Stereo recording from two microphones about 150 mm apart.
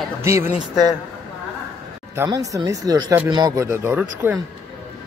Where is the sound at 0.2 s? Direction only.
20° right (ahead or behind).